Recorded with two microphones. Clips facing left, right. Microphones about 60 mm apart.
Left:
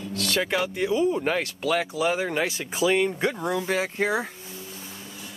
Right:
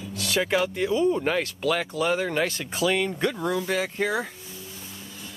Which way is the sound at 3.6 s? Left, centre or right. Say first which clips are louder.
Left 1 dB; left.